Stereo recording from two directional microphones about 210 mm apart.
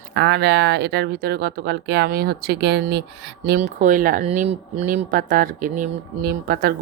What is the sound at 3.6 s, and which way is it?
Speech, 35° right (ahead or behind).